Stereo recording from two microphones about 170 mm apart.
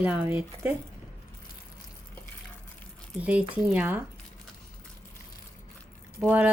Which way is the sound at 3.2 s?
10° right (ahead or behind).